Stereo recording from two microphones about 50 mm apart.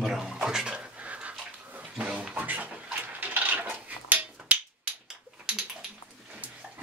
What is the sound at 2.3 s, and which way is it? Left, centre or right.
Cutlery, right.